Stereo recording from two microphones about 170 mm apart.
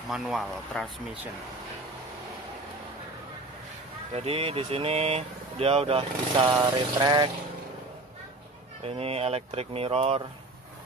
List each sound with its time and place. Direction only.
0.1 s speech: centre (ahead or behind)
4.1 s speech: 35° right (ahead or behind)
6.6 s a sound: 25° right (ahead or behind)
8.8 s speech: 35° right (ahead or behind)